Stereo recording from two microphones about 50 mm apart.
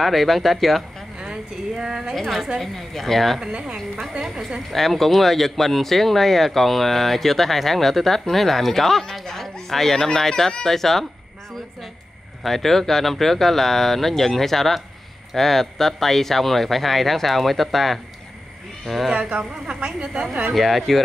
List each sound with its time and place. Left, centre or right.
0.0 s speech: centre
1.3 s speech: centre
2.1 s speech: centre
3.3 s speech: centre
4.6 s speech: centre
12.4 s speech: centre
19.1 s a woman's voice: centre
20.5 s speech: centre